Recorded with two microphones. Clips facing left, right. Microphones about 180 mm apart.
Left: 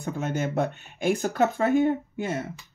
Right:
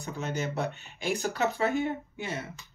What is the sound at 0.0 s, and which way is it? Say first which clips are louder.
Speech: left 5 dB; 50° left (ahead or behind).